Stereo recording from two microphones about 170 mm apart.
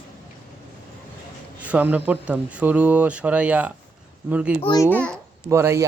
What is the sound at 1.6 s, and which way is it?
Speech, 10° right (ahead or behind).